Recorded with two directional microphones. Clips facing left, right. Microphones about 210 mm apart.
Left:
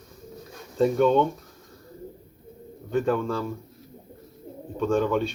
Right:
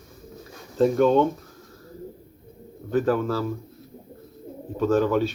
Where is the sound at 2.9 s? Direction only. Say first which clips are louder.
Right 2 dB; 5° right (ahead or behind).